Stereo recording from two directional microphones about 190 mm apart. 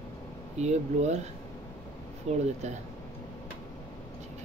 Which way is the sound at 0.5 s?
35° right (ahead or behind).